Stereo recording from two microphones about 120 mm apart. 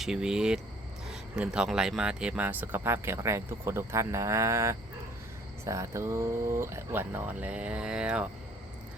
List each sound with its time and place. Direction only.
0.0 s speech: 5° right (ahead or behind)